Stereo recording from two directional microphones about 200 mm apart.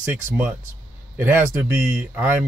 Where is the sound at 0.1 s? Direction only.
5° right (ahead or behind).